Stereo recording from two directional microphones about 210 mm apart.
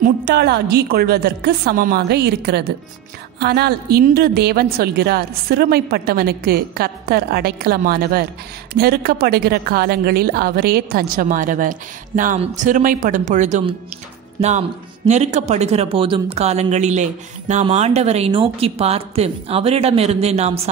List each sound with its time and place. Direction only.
0.0 s a woman's voice: 50° right (ahead or behind); by 13.7 s 35° right (ahead or behind)
15.0 s speech: 35° right (ahead or behind)